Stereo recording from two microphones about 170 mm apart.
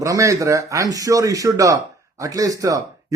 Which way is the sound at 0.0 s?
20° right (ahead or behind).